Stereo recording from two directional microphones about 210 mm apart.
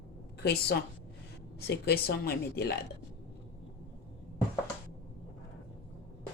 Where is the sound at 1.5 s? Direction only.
50° left (ahead or behind).